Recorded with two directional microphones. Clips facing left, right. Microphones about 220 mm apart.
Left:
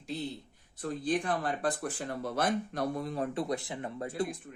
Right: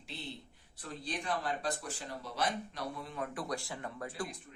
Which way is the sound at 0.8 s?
50° left (ahead or behind).